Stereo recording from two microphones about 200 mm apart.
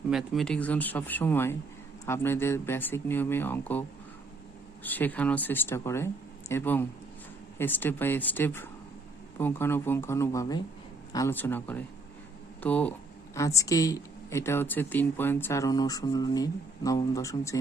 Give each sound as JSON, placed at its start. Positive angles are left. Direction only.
{"t": 0.1, "sound": "speech", "side_deg": 0}